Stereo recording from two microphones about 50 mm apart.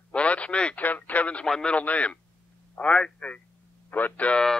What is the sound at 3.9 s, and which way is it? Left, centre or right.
Speech, left.